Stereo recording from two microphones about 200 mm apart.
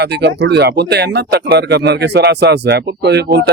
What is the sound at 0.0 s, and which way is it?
Speech, 55° right (ahead or behind).